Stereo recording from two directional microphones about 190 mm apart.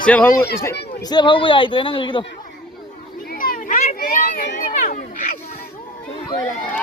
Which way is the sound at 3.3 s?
45° left (ahead or behind).